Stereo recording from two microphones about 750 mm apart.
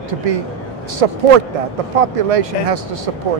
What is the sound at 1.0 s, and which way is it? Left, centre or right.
Speech, right.